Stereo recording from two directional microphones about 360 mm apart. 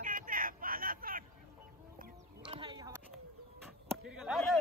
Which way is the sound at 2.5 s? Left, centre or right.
Centre.